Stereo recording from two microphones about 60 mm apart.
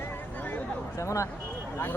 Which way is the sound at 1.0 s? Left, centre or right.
Left.